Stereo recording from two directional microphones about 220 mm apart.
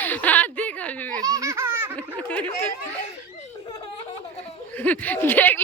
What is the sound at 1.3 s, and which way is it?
Laughter, 15° right (ahead or behind).